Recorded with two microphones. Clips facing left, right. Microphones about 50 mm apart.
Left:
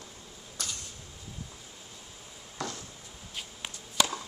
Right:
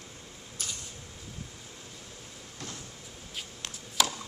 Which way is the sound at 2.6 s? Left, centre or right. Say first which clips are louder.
Left 7 dB; left.